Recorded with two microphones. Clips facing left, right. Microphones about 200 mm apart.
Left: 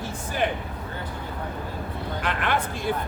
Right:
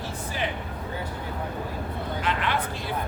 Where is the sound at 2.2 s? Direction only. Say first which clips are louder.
Left 2 dB; 50° left (ahead or behind).